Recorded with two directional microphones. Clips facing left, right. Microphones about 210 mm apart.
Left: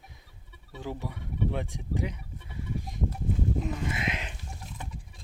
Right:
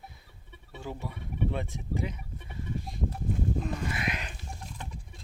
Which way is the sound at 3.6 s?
20° left (ahead or behind).